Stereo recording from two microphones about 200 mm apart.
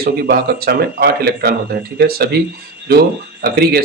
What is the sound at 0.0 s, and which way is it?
Speech, 50° right (ahead or behind).